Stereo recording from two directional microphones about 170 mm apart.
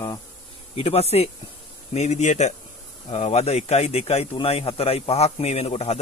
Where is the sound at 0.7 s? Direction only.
35° left (ahead or behind).